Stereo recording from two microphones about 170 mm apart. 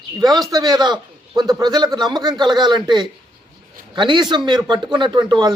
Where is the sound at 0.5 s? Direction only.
25° right (ahead or behind).